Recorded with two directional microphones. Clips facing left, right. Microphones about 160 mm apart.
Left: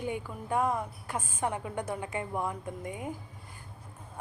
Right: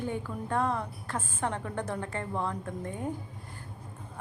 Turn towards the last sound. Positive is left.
turn(degrees=10)  # may be behind; listen again after turning